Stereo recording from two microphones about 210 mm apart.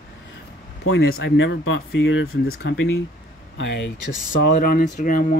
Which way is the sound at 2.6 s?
55° left (ahead or behind).